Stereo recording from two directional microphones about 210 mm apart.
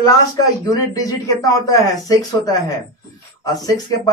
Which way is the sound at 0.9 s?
15° left (ahead or behind).